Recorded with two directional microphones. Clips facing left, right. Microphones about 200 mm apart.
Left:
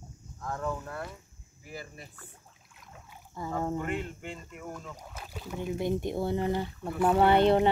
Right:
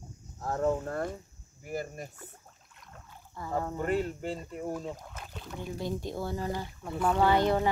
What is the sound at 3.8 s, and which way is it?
Speech, 40° right (ahead or behind).